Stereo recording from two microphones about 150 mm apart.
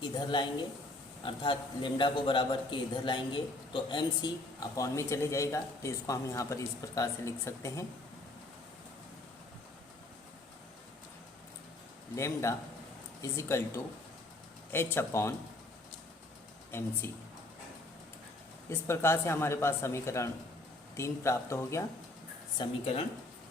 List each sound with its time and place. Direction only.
0.0 s a man's voice: 30° left (ahead or behind)
12.1 s a man's voice: 20° left (ahead or behind)
17.0 s speech: 15° left (ahead or behind)
18.7 s a man's voice: 15° left (ahead or behind)
22.6 s a man's voice: 30° left (ahead or behind)